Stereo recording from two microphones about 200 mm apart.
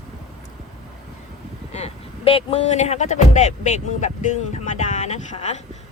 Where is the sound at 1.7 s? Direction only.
30° left (ahead or behind).